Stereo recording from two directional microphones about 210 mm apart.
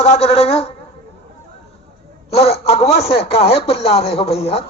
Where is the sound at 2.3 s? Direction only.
30° left (ahead or behind).